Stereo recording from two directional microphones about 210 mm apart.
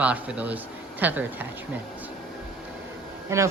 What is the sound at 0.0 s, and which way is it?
Speech, 5° right (ahead or behind).